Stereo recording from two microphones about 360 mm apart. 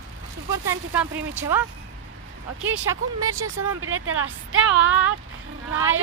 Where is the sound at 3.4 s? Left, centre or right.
Right.